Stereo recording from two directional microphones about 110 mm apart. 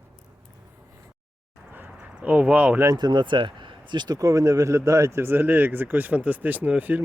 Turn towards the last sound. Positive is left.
turn(degrees=-15)  # may be behind; listen again after turning